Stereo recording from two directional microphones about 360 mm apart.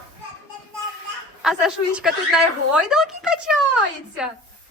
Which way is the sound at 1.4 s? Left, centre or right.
Centre.